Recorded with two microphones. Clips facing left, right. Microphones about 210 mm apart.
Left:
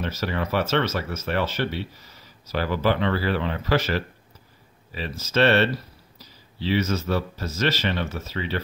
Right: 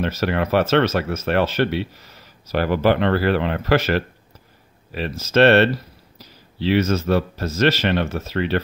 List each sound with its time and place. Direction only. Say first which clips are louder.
0.0 s speech: right 6 dB; 65° right (ahead or behind)
2.5 s speech: right 5 dB; 60° right (ahead or behind)